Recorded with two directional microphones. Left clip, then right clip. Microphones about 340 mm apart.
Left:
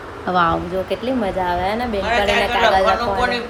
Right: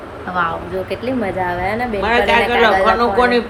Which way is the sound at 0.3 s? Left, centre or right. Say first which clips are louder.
Left 2 dB; centre.